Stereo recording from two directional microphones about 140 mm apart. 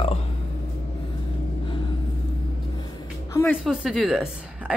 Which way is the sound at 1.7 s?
35° left (ahead or behind).